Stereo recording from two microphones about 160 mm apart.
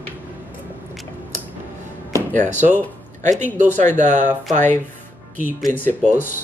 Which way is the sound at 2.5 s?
50° right (ahead or behind).